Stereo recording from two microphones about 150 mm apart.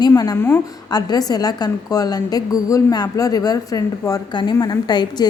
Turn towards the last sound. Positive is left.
turn(degrees=30)  # may be behind; listen again after turning